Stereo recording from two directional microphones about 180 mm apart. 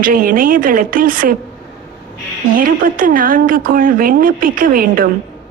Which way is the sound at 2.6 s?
50° right (ahead or behind).